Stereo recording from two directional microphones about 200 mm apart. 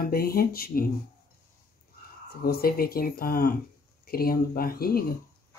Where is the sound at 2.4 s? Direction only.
50° left (ahead or behind).